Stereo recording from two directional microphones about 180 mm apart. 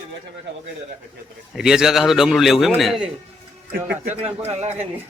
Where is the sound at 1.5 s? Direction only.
5° right (ahead or behind).